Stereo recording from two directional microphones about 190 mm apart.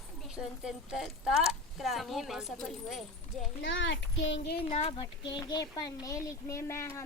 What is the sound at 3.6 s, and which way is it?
Speech, 80° left.